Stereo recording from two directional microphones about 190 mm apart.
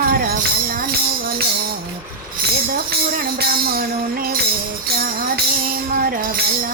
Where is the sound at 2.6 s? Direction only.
50° right (ahead or behind).